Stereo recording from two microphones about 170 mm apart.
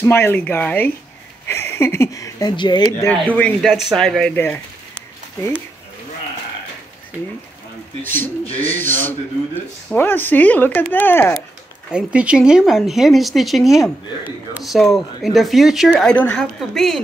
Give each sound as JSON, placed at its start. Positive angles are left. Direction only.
{"t": 0.0, "sound": "speech", "side_deg": 15}
{"t": 3.1, "sound": "speech", "side_deg": 10}
{"t": 8.0, "sound": "speech", "side_deg": 10}
{"t": 8.5, "sound": "speech", "side_deg": 35}
{"t": 9.9, "sound": "speech", "side_deg": 10}
{"t": 11.9, "sound": "speech", "side_deg": -5}